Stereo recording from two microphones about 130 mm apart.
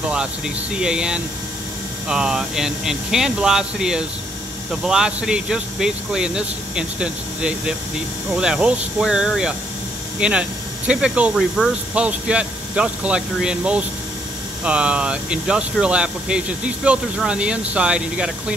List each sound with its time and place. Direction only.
0.7 s speech: 5° right (ahead or behind)